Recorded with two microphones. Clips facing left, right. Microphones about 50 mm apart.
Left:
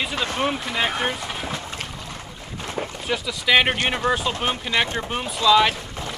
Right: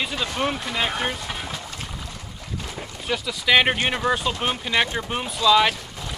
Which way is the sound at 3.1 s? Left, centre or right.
Centre.